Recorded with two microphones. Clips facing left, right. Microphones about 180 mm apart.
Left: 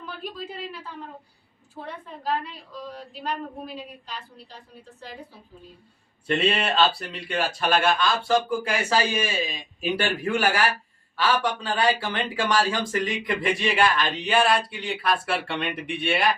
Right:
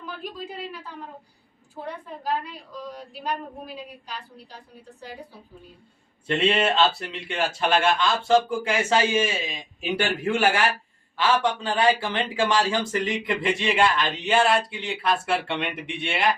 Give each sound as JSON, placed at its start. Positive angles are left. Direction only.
{"t": 0.0, "sound": "speech", "side_deg": -10}
{"t": 2.2, "sound": "speech", "side_deg": -10}
{"t": 6.7, "sound": "a man's voice", "side_deg": -20}